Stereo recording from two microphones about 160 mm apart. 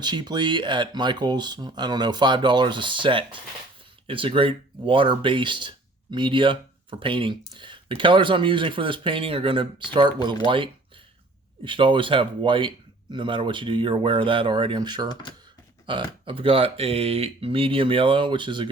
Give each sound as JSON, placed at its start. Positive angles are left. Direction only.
{"t": 0.0, "sound": "speech", "side_deg": -25}